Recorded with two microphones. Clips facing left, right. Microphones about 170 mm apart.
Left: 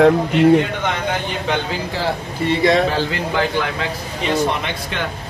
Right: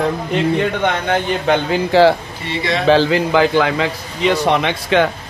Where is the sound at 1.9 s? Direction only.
90° right.